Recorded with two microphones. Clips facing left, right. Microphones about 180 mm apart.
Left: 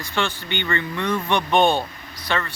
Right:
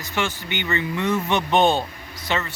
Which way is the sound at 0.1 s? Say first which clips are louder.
Even; 15° right (ahead or behind).